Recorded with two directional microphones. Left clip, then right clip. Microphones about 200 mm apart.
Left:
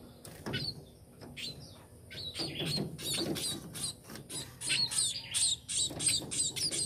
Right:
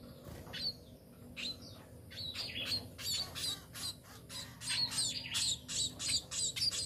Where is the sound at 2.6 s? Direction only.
10° right (ahead or behind).